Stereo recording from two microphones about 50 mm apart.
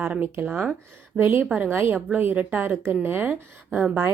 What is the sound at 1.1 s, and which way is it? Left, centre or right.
Speech, right.